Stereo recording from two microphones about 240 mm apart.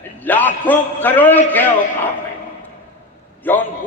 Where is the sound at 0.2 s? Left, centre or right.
Centre.